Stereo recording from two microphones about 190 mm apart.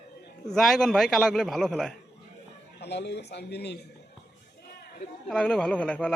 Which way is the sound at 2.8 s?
65° left (ahead or behind).